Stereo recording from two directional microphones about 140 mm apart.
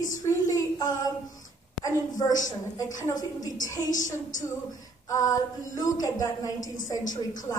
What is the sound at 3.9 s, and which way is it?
Speech, 65° left (ahead or behind).